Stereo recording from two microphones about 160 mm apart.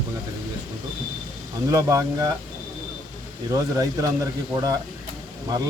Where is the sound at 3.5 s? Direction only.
20° right (ahead or behind).